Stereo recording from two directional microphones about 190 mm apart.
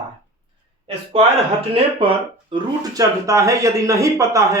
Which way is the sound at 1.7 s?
30° right (ahead or behind).